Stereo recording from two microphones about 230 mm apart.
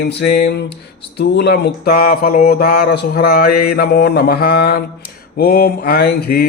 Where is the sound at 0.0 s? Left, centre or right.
Left.